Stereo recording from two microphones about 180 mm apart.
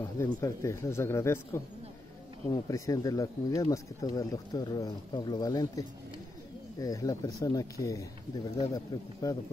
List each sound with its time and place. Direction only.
0.0 s a man's voice: 15° left (ahead or behind)